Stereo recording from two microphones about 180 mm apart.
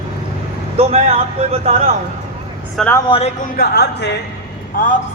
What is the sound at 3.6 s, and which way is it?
Speech, 65° left (ahead or behind).